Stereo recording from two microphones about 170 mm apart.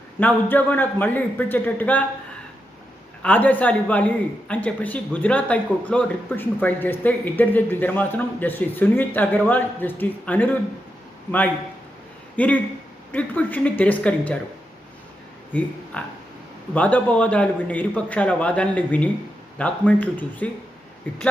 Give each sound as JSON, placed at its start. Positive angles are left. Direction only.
{"t": 0.2, "sound": "speech", "side_deg": 10}
{"t": 3.2, "sound": "speech", "side_deg": 10}
{"t": 12.4, "sound": "speech", "side_deg": 10}
{"t": 15.9, "sound": "speech", "side_deg": 5}